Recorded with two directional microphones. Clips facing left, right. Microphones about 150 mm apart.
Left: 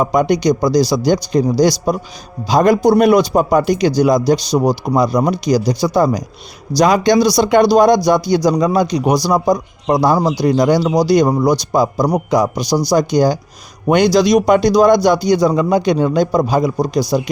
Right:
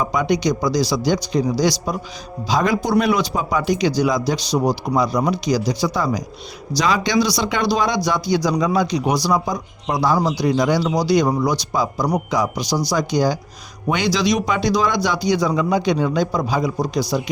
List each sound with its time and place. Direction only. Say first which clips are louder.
0.0 s a man's voice: left 5 dB; 45° left (ahead or behind)